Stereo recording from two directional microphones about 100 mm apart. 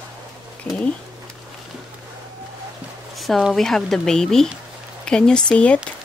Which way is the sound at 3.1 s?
Centre (ahead or behind).